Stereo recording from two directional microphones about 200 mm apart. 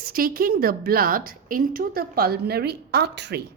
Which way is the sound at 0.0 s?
45° right (ahead or behind).